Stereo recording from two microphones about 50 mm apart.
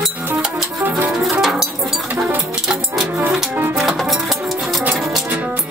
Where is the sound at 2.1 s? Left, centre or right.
Right.